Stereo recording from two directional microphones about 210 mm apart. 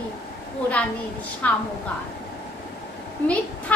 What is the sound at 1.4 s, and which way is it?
Speech, 5° left (ahead or behind).